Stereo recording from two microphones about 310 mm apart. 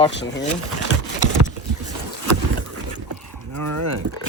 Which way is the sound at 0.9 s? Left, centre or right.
Left.